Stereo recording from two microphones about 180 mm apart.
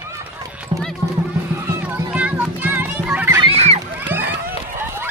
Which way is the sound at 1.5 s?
10° right (ahead or behind).